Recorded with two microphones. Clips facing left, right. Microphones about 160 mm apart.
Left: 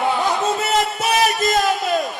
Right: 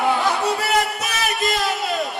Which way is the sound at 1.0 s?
35° left (ahead or behind).